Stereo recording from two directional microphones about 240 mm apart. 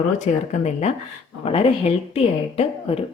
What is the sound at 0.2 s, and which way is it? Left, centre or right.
A woman's voice, left.